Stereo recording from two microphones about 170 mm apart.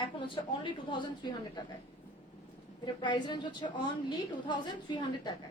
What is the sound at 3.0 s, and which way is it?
Speech, 25° left (ahead or behind).